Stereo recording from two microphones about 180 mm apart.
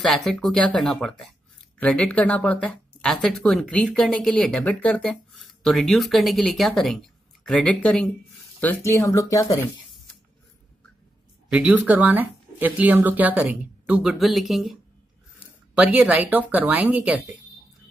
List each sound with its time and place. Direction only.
0.0 s speech: centre (ahead or behind); by 9.6 s 20° left (ahead or behind)
11.5 s speech: 5° right (ahead or behind)